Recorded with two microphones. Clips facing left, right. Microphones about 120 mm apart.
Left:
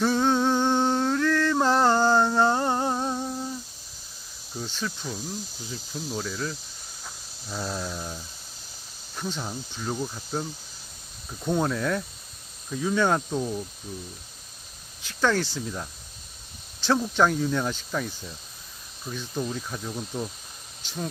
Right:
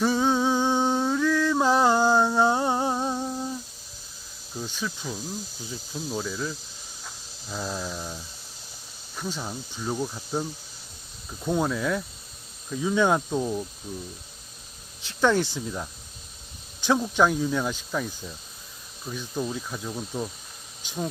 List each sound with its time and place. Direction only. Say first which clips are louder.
0.0 s a sound: even; 5° right (ahead or behind)
2.9 s humming: right 1 dB; 5° right (ahead or behind)
4.6 s speech: even; 10° right (ahead or behind)
7.0 s insect: left 1 dB; 5° left (ahead or behind)
7.6 s cricket: even; centre (ahead or behind)
9.1 s speech: even; centre (ahead or behind)
9.7 s cricket: right 2 dB; 5° right (ahead or behind)
11.4 s cricket: even; 5° right (ahead or behind)
12.8 s speech: right 1 dB; 15° right (ahead or behind)
15.0 s speech: right 2 dB; 20° right (ahead or behind)
16.8 s speech: right 1 dB; 15° right (ahead or behind)
19.0 s cricket: even; 10° right (ahead or behind)
20.8 s speech: right 2 dB; 10° right (ahead or behind)